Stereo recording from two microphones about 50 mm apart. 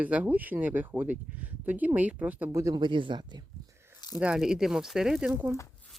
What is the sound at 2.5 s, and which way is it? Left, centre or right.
Speech, right.